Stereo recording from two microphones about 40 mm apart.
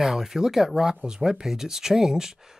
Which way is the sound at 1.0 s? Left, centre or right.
Centre.